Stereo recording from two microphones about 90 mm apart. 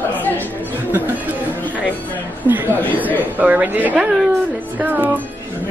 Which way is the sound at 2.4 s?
20° right (ahead or behind).